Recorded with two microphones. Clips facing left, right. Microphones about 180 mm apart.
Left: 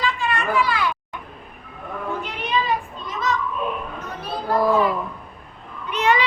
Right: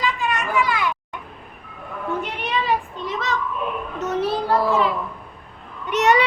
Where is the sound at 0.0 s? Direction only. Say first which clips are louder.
Even; 15° right (ahead or behind).